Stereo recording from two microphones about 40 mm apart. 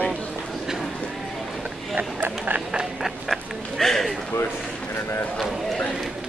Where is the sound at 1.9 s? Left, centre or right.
Right.